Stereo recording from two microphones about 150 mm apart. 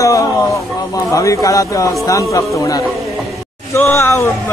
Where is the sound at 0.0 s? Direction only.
20° left (ahead or behind).